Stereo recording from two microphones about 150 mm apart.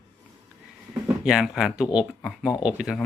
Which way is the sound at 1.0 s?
5° right (ahead or behind).